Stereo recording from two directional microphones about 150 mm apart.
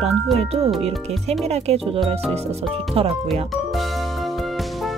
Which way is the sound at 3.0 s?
40° right (ahead or behind).